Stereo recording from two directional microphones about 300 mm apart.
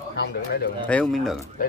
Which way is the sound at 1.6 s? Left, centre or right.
Left.